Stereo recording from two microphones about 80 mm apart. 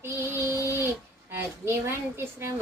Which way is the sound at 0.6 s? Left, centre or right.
Right.